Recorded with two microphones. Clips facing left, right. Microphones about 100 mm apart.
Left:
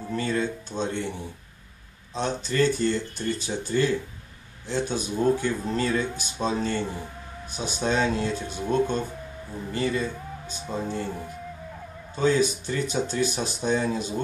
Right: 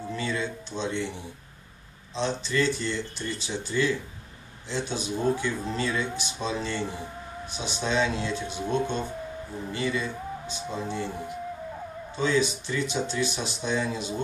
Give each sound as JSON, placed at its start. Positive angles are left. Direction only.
{"t": 0.1, "sound": "speech", "side_deg": 45}
{"t": 2.1, "sound": "speech", "side_deg": 45}
{"t": 12.2, "sound": "speech", "side_deg": 45}